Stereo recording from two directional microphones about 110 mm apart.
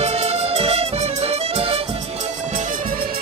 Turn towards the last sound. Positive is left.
turn(degrees=-65)  # may be behind; listen again after turning